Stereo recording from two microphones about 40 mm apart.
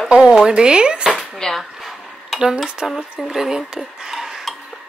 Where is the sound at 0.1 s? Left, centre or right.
Centre.